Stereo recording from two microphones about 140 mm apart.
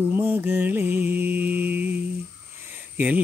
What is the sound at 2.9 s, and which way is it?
Speech, 10° right (ahead or behind).